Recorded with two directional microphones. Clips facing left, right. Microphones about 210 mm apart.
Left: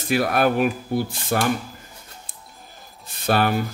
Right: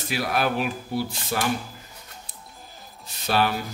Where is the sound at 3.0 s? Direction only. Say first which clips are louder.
Left 3 dB; 50° left (ahead or behind).